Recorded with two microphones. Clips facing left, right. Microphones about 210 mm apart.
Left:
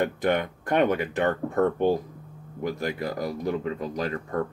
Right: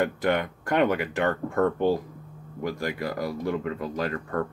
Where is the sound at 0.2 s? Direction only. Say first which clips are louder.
Left 1 dB; 20° left (ahead or behind).